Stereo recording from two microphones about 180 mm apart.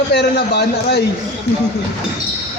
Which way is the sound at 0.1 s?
65° left (ahead or behind).